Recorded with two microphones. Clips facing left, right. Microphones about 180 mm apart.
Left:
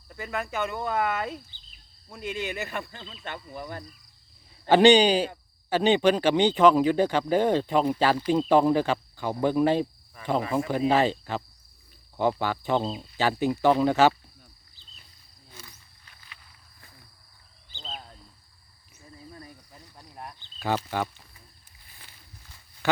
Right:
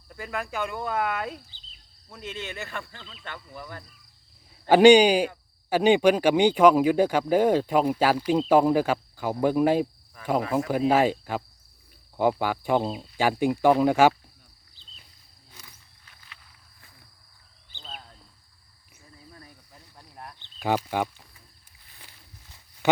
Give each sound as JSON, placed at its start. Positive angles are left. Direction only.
{"t": 0.1, "sound": "speech", "side_deg": 0}
{"t": 4.7, "sound": "speech", "side_deg": -10}
{"t": 15.6, "sound": "wild animals", "side_deg": 0}
{"t": 20.0, "sound": "a sound", "side_deg": 15}
{"t": 20.6, "sound": "speech", "side_deg": -15}